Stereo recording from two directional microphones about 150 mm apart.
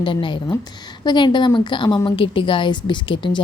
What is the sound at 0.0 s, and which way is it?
A woman's voice, 35° left (ahead or behind).